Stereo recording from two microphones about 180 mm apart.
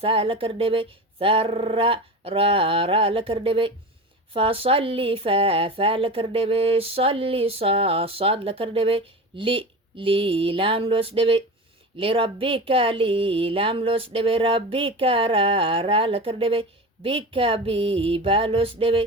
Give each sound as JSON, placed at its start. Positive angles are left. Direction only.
{"t": 0.0, "sound": "speech", "side_deg": -30}